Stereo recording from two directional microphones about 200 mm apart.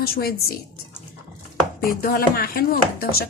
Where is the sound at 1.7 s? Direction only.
45° left (ahead or behind).